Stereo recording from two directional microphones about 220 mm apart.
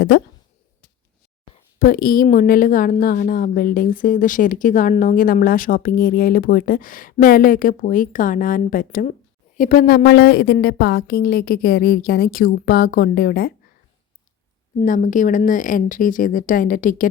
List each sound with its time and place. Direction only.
0.1 s a woman's voice: 50° left (ahead or behind)
1.8 s a woman's voice: 40° left (ahead or behind)
14.8 s a woman's voice: 35° left (ahead or behind)